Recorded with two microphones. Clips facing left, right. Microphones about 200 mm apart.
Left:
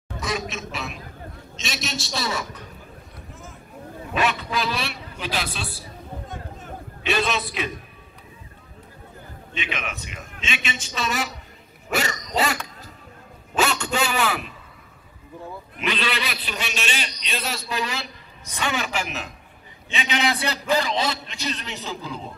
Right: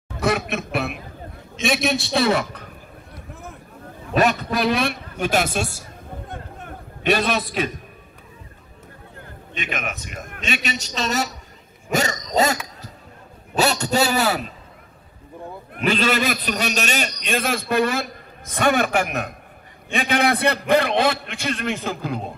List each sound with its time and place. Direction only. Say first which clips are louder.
0.2 s a sound: right 7 dB; 60° right (ahead or behind)
1.6 s a man's voice: right 10 dB; 55° right (ahead or behind)
4.1 s a man's voice: right 5 dB; 40° right (ahead or behind)
4.6 s a sound: right 6 dB; 55° right (ahead or behind)
9.6 s a man's voice: right 3 dB; 45° right (ahead or behind)
15.7 s a man's voice: right 7 dB; 45° right (ahead or behind)